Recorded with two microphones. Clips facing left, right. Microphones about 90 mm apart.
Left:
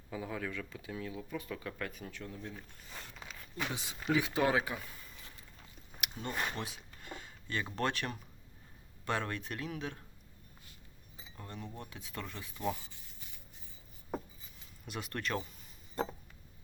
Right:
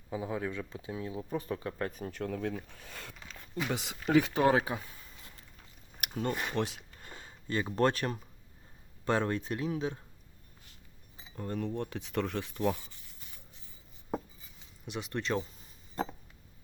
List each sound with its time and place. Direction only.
0.1 s speech: 25° right (ahead or behind); by 2.2 s 40° right (ahead or behind)
2.2 s speech: 75° right (ahead or behind); by 3.2 s 90° right
3.7 s speech: 70° right (ahead or behind)
4.0 s speech: 55° right (ahead or behind)
4.5 s speech: 35° right (ahead or behind)
6.0 s a sound: 50° right (ahead or behind)
6.6 s speech: 80° right
7.0 s a sound: 35° right (ahead or behind)
9.0 s speech: 30° right (ahead or behind)
11.3 s speech: 40° right (ahead or behind)
11.8 s speech: 60° right (ahead or behind)
14.8 s speech: 20° right (ahead or behind)